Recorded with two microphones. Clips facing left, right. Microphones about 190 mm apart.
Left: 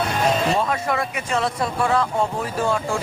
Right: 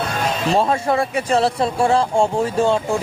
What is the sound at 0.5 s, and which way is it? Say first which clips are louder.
Speech: right 5 dB; 30° right (ahead or behind).